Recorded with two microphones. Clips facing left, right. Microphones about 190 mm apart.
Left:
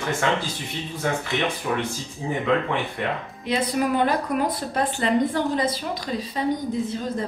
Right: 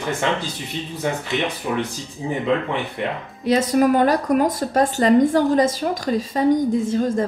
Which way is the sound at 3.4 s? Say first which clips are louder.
Right 7 dB; 40° right (ahead or behind).